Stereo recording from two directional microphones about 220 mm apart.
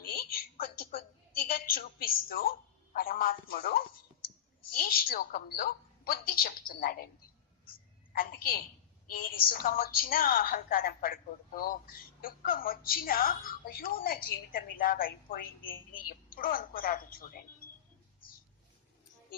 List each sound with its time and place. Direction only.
0.3 s a sound: 40° left (ahead or behind)
1.5 s a woman's voice: 40° left (ahead or behind)
8.1 s a woman's voice: 40° left (ahead or behind)